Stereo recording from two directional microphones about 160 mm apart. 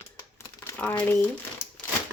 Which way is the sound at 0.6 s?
15° left (ahead or behind).